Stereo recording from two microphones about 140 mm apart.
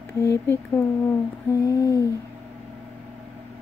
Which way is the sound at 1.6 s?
25° left (ahead or behind).